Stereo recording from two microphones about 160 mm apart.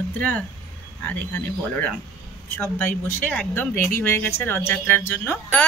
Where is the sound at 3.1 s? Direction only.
10° left (ahead or behind).